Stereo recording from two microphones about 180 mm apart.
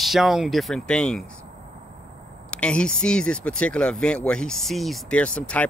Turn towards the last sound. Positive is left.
turn(degrees=5)  # may be behind; listen again after turning